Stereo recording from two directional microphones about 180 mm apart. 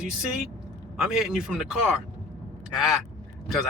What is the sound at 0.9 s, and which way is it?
Speech, centre (ahead or behind).